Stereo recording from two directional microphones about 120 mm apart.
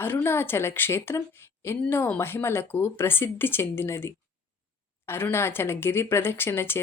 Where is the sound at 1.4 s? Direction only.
20° left (ahead or behind).